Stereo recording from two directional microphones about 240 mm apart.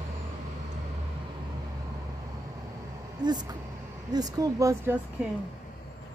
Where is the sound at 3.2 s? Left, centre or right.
Centre.